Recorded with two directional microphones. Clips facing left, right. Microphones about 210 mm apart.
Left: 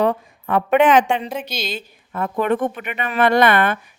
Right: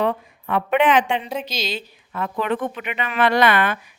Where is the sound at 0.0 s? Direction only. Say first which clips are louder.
Left 3 dB; 45° left (ahead or behind).